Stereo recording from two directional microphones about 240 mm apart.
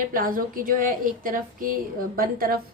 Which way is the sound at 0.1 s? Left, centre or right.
Right.